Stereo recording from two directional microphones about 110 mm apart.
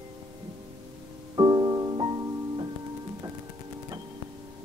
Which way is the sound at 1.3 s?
40° right (ahead or behind).